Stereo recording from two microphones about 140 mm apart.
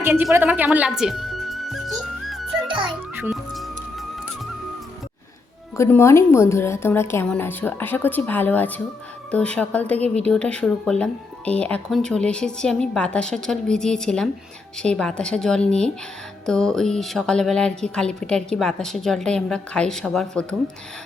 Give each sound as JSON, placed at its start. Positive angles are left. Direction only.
{"t": 0.0, "sound": "music", "side_deg": -15}
{"t": 2.6, "sound": "music", "side_deg": -35}
{"t": 3.2, "sound": "music", "side_deg": 0}
{"t": 5.7, "sound": "a woman's voice", "side_deg": 20}